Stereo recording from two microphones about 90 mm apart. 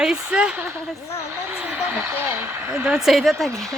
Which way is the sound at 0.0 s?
10° right (ahead or behind).